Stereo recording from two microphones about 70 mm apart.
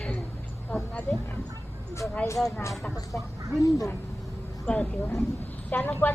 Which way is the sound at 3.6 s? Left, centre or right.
Left.